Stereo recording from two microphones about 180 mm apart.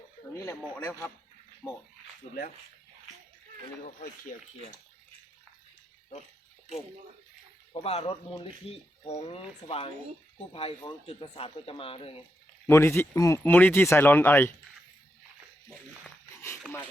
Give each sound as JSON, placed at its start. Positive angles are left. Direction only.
{"t": 0.3, "sound": "speech", "side_deg": 10}
{"t": 3.8, "sound": "speech", "side_deg": 50}
{"t": 7.7, "sound": "speech", "side_deg": 30}
{"t": 12.6, "sound": "speech", "side_deg": 15}